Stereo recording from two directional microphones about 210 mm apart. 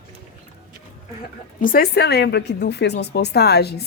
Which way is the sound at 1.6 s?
45° left (ahead or behind).